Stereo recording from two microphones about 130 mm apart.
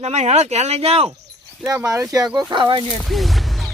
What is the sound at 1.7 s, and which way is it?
Speech, 25° right (ahead or behind).